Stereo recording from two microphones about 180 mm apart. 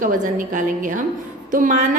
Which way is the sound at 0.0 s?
45° right (ahead or behind).